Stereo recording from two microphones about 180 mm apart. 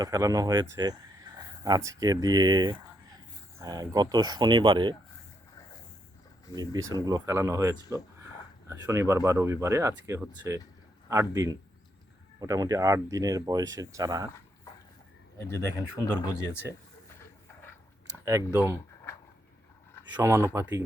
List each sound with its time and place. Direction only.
0.0 s speech: 20° right (ahead or behind)
6.5 s speech: 20° right (ahead or behind)
15.4 s speech: 15° left (ahead or behind)
18.3 s speech: 15° right (ahead or behind)
20.1 s speech: 15° right (ahead or behind)